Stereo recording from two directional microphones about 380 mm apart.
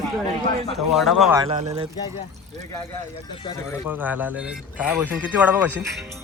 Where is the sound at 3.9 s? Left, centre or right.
Centre.